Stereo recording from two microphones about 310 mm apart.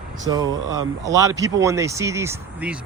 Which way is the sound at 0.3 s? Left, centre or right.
Centre.